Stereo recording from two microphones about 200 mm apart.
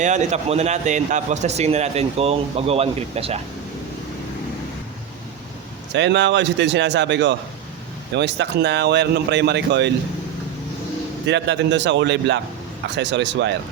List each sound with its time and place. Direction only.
0.0 s a man's voice: 35° right (ahead or behind)
5.9 s speech: 60° right (ahead or behind)
11.3 s speech: 60° right (ahead or behind)